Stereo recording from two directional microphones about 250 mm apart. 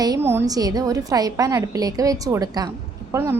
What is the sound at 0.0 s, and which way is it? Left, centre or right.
A woman's voice, centre.